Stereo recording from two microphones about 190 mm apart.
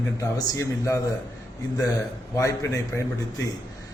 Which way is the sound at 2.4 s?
15° left (ahead or behind).